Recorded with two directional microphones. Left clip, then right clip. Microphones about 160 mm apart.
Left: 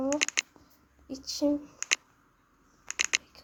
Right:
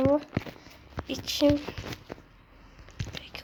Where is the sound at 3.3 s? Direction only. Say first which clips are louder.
Right 13 dB; centre (ahead or behind).